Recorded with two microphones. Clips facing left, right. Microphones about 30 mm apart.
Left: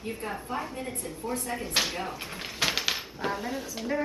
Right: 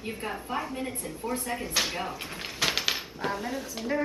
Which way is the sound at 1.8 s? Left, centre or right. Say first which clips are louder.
Right 1 dB; centre.